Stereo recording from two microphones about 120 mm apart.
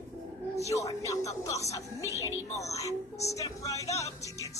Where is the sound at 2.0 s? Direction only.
25° right (ahead or behind).